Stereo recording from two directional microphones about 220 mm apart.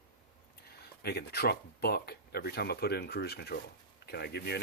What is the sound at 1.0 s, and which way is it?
Speech, 45° left (ahead or behind).